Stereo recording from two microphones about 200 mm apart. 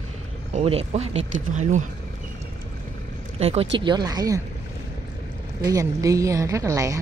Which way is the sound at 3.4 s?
30° right (ahead or behind).